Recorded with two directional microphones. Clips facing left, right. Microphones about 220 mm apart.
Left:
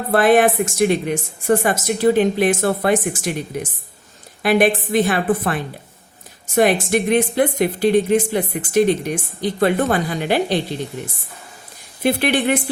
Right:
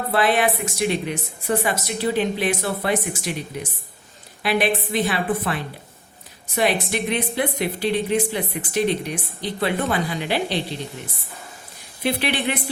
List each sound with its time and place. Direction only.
0.1 s speech: 50° left (ahead or behind)
12.0 s speech: 45° left (ahead or behind)